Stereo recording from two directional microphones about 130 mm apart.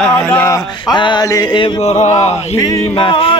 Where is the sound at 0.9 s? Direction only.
35° left (ahead or behind).